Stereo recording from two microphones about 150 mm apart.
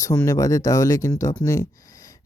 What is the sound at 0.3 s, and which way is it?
Speech, 20° left (ahead or behind).